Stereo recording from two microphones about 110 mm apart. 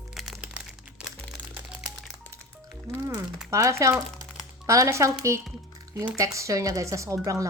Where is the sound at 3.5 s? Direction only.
25° right (ahead or behind).